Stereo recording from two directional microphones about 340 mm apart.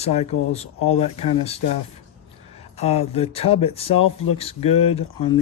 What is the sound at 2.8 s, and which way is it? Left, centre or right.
Speech, centre.